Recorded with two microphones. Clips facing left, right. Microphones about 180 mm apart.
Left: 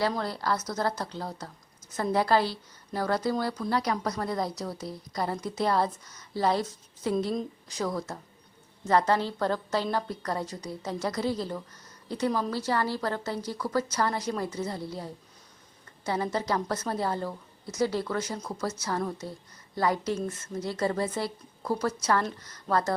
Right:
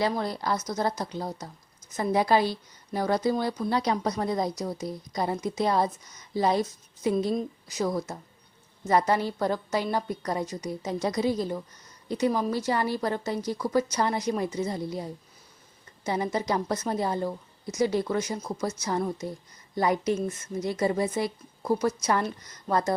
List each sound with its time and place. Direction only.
0.0 s a woman's voice: 15° right (ahead or behind)